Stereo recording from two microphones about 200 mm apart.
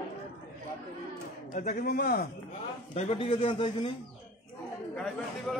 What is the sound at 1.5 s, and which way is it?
Speech, 45° left (ahead or behind).